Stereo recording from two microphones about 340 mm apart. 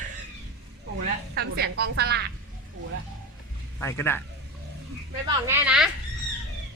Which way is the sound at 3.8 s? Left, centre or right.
Centre.